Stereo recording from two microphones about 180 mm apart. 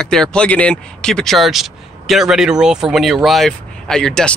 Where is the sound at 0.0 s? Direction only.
5° left (ahead or behind).